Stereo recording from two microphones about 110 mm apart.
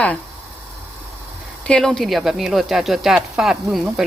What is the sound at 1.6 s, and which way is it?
Speech, 5° left (ahead or behind).